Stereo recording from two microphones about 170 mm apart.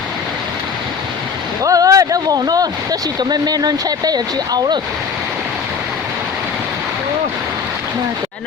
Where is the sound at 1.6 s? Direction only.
20° right (ahead or behind).